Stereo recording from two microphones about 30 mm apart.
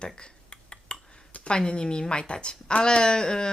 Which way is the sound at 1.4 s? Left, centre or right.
Left.